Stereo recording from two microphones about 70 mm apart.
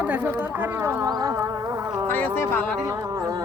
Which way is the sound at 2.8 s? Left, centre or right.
Right.